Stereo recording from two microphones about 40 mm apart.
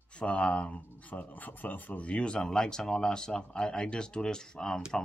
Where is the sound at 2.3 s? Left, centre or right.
Centre.